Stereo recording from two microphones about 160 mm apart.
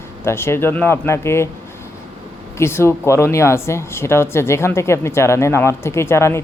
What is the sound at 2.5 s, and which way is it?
Speech, 15° left (ahead or behind).